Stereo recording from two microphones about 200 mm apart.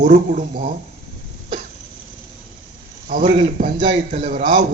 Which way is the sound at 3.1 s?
40° right (ahead or behind).